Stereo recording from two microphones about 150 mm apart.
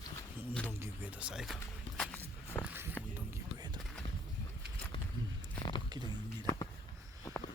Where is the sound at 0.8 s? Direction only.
10° right (ahead or behind).